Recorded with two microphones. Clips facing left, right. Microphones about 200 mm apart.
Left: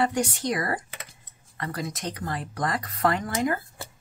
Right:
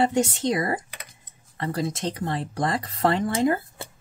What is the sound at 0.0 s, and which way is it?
Speech, 25° right (ahead or behind).